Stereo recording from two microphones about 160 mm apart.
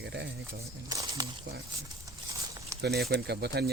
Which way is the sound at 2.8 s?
90° right.